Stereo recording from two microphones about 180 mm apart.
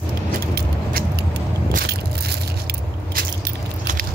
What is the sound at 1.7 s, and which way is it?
Crushing, 60° right (ahead or behind).